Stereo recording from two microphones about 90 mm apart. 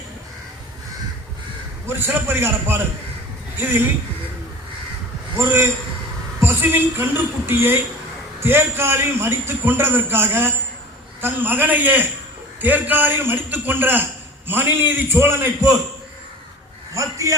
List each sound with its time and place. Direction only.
1.9 s a man's voice: 25° right (ahead or behind)
5.4 s a man's voice: 30° right (ahead or behind)
16.9 s a man's voice: 35° right (ahead or behind)